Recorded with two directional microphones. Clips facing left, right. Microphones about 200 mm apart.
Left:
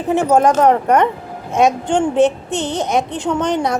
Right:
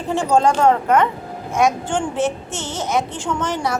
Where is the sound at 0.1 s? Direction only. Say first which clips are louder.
Left 3 dB; 20° left (ahead or behind).